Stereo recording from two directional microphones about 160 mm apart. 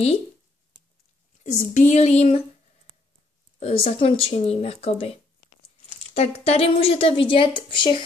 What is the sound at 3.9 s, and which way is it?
A woman's voice, 35° left (ahead or behind).